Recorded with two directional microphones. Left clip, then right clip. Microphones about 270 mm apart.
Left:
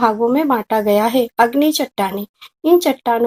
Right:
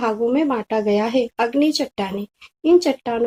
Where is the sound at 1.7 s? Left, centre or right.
Left.